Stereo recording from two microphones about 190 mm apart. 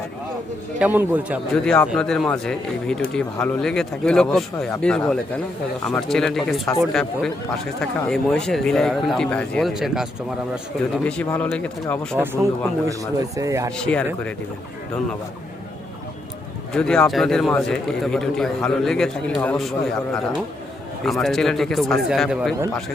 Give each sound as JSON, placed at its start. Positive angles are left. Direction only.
{"t": 0.8, "sound": "speech", "side_deg": -10}
{"t": 1.6, "sound": "a man's voice", "side_deg": 5}
{"t": 11.0, "sound": "speech", "side_deg": 10}
{"t": 12.1, "sound": "speech", "side_deg": -10}
{"t": 13.7, "sound": "a man's voice", "side_deg": 5}
{"t": 16.7, "sound": "a man's voice", "side_deg": 5}
{"t": 21.0, "sound": "a man's voice", "side_deg": 0}